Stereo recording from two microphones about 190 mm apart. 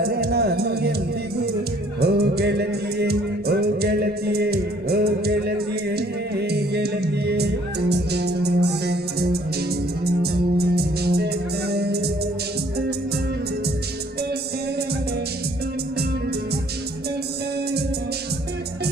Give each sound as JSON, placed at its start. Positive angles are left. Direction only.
{"t": 0.0, "sound": "music", "side_deg": -55}
{"t": 2.0, "sound": "music", "side_deg": -55}